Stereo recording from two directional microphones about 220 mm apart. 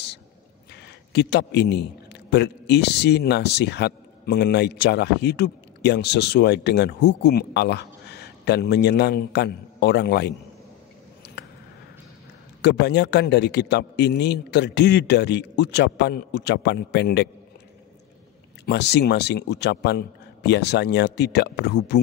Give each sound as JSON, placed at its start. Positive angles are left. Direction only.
{"t": 1.1, "sound": "speech", "side_deg": 50}
{"t": 12.6, "sound": "speech", "side_deg": 50}
{"t": 18.7, "sound": "speech", "side_deg": 50}